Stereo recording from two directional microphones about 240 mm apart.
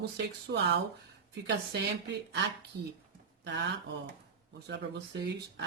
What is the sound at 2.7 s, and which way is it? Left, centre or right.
Speech, right.